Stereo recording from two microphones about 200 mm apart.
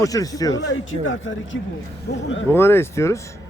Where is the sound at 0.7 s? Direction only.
75° left (ahead or behind).